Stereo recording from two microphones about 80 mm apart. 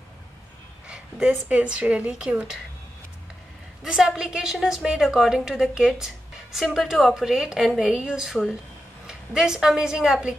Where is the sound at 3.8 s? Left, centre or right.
Centre.